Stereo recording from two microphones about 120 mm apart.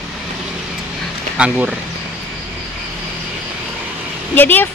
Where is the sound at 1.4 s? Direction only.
10° right (ahead or behind).